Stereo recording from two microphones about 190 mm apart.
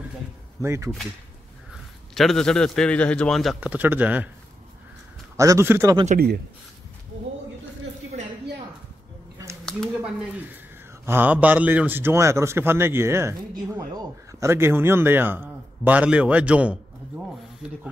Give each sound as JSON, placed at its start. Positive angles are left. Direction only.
{"t": 0.6, "sound": "a man's voice", "side_deg": -15}
{"t": 2.1, "sound": "a man's voice", "side_deg": 0}
{"t": 5.4, "sound": "a man's voice", "side_deg": -15}
{"t": 6.1, "sound": "speech", "side_deg": -55}
{"t": 9.7, "sound": "speech", "side_deg": 0}
{"t": 11.1, "sound": "a man's voice", "side_deg": -10}